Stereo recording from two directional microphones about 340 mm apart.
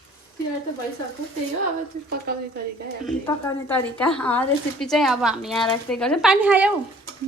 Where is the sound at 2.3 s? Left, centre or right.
Right.